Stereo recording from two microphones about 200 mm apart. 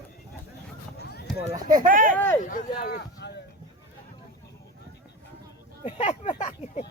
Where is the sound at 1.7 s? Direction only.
45° right (ahead or behind).